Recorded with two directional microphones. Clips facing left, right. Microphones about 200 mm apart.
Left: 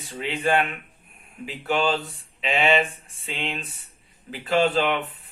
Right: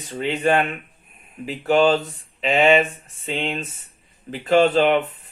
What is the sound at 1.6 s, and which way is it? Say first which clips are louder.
Speech: right 7 dB; 40° right (ahead or behind).